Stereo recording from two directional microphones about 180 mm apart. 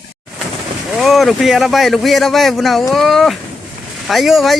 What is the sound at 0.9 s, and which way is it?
Speech, centre (ahead or behind).